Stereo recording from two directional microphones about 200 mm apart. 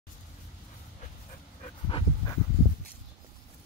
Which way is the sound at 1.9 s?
25° left (ahead or behind).